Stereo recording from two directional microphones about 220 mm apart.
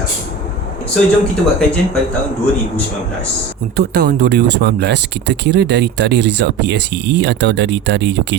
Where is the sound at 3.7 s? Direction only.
45° right (ahead or behind).